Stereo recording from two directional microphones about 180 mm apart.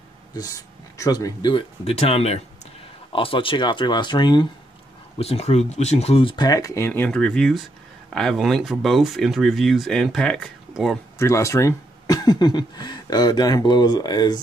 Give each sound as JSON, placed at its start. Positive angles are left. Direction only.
{"t": 0.3, "sound": "speech", "side_deg": 20}
{"t": 5.2, "sound": "speech", "side_deg": 35}
{"t": 11.1, "sound": "speech", "side_deg": 15}